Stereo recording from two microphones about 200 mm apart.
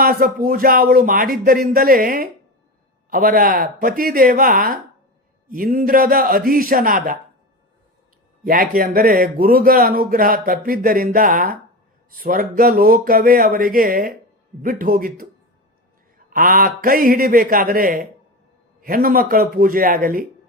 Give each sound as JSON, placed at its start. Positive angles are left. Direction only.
{"t": 0.0, "sound": "speech", "side_deg": -45}
{"t": 8.4, "sound": "speech", "side_deg": -45}